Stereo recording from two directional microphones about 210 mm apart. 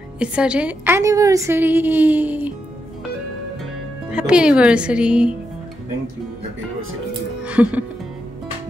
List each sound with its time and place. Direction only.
0.2 s a woman's voice: 5° right (ahead or behind)
4.1 s speech: 5° right (ahead or behind)
7.4 s music: 5° right (ahead or behind)